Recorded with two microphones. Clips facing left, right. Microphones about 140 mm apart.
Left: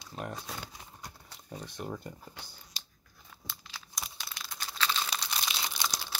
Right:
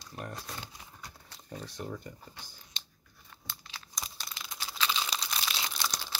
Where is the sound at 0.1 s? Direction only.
20° left (ahead or behind).